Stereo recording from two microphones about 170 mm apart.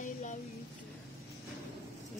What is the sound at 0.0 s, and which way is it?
Music, 45° left (ahead or behind).